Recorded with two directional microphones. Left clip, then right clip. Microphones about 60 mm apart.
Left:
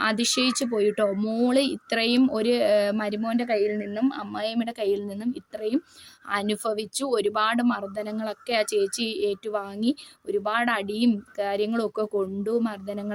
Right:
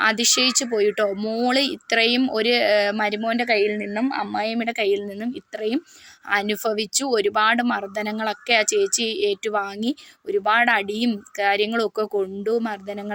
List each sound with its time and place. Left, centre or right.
0.0 s speech: centre
0.3 s speech: left
1.1 s speech: left
1.5 s speech: left